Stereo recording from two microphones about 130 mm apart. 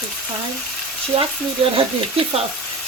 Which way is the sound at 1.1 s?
50° right (ahead or behind).